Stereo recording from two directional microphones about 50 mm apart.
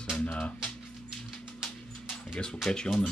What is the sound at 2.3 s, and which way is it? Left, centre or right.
Speech, centre.